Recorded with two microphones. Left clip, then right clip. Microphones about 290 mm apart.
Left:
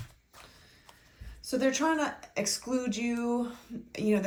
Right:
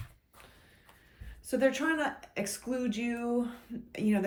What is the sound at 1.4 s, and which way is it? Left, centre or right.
Speech, centre.